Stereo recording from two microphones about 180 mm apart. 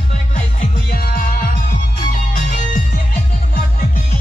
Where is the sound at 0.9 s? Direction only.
55° left (ahead or behind).